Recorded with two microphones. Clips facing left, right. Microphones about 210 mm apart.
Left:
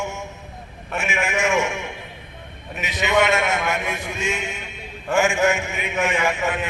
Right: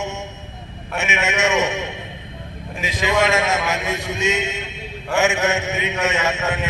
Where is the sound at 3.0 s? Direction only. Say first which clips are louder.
Even; 90° right.